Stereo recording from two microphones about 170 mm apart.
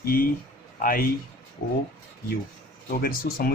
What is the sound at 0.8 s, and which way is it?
Speech, 55° left (ahead or behind).